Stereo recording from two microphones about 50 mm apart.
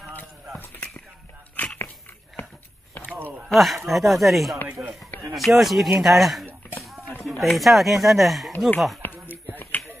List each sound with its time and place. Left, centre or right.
1.6 s dog: left
3.4 s speech: centre
4.8 s speech: right
5.3 s speech: centre
9.0 s a sound: left